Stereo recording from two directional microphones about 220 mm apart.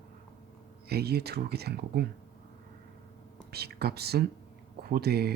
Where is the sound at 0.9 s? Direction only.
45° right (ahead or behind).